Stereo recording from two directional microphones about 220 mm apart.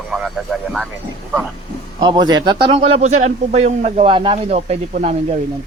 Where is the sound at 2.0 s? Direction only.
20° right (ahead or behind).